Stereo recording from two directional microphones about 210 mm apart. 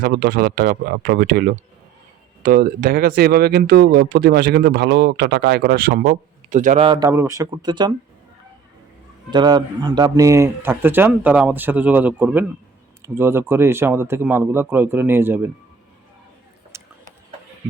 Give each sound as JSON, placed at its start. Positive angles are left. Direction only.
{"t": 0.0, "sound": "speech", "side_deg": -50}
{"t": 6.8, "sound": "speech", "side_deg": -20}
{"t": 9.3, "sound": "a man's voice", "side_deg": -20}
{"t": 16.7, "sound": "a sound", "side_deg": -15}